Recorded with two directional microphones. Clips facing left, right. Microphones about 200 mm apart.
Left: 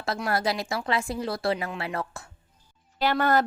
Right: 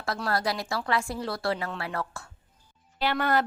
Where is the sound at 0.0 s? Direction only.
25° left (ahead or behind).